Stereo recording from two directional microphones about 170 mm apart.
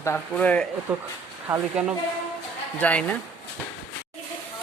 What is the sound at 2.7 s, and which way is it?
Speech, 10° left (ahead or behind).